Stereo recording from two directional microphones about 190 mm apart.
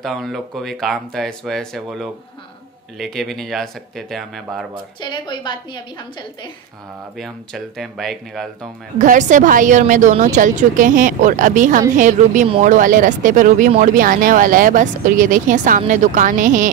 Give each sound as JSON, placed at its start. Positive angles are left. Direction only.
{"t": 0.0, "sound": "speech", "side_deg": 0}
{"t": 5.0, "sound": "a woman's voice", "side_deg": 25}
{"t": 7.2, "sound": "speech", "side_deg": 0}
{"t": 8.9, "sound": "a woman's voice", "side_deg": -40}